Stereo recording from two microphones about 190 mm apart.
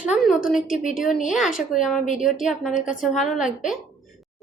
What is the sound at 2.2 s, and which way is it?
Speech, 45° left (ahead or behind).